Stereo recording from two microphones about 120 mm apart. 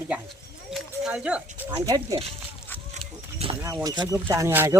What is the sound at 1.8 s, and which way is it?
Speech, 30° right (ahead or behind).